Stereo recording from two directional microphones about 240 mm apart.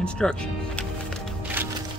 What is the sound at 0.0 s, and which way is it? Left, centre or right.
Speech, centre.